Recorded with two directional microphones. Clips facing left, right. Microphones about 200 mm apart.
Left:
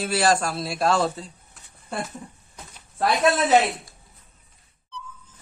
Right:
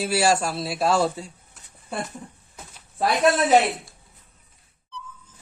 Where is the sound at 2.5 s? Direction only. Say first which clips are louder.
Even; 5° right (ahead or behind).